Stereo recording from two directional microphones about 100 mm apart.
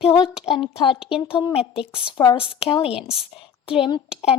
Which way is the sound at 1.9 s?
65° left (ahead or behind).